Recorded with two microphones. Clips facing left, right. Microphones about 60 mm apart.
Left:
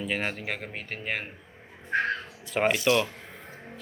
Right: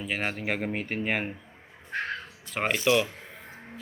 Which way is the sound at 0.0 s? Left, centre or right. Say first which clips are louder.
Even; centre.